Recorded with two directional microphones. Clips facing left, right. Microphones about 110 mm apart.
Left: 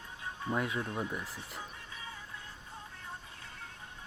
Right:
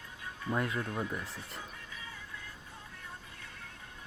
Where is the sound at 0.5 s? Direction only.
5° left (ahead or behind).